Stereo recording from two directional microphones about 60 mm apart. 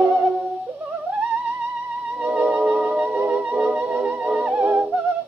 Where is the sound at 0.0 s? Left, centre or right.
Right.